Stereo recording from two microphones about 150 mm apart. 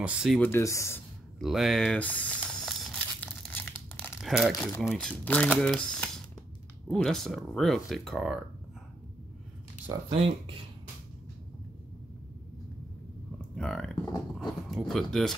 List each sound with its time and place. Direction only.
0.0 s speech: 5° right (ahead or behind)
0.4 s speech: 15° left (ahead or behind)
1.4 s speech: centre (ahead or behind)
2.0 s crumpling: 10° left (ahead or behind)
4.2 s speech: centre (ahead or behind)
10.0 s speech: 40° right (ahead or behind)
13.6 s speech: 5° left (ahead or behind)